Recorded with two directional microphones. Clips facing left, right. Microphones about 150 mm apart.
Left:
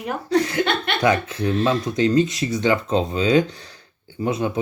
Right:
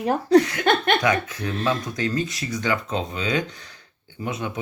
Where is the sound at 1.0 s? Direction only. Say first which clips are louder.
Left 4 dB; 30° left (ahead or behind).